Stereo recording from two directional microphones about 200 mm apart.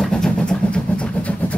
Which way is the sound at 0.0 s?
5° left (ahead or behind).